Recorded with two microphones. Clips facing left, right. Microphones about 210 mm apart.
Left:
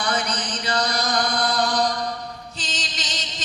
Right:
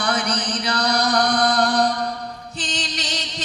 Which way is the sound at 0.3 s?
65° right (ahead or behind).